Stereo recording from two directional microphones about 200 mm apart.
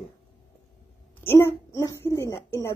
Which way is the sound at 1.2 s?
10° left (ahead or behind).